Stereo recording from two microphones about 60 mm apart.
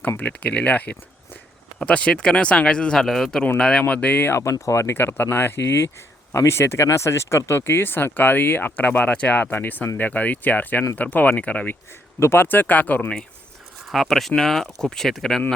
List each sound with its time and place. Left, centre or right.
0.2 s speech: left
3.8 s speech: left
4.3 s speech: left
4.9 s speech: left
12.2 s speech: left
13.8 s speech: centre